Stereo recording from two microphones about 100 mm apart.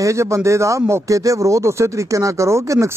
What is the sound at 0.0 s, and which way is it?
Speech, 30° right (ahead or behind).